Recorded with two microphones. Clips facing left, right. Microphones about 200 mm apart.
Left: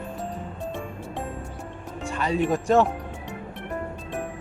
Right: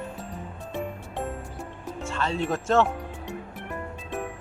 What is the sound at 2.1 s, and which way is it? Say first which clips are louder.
Speech: left 4 dB; 15° left (ahead or behind).